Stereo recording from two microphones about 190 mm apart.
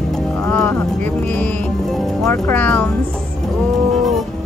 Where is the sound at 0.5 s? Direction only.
5° left (ahead or behind).